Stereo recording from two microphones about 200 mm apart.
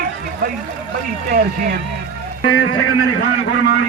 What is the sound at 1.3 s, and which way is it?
Speech, 50° right (ahead or behind).